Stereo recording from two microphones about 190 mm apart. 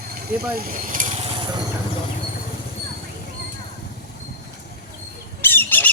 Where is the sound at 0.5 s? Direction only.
50° right (ahead or behind); by 1.6 s 25° right (ahead or behind).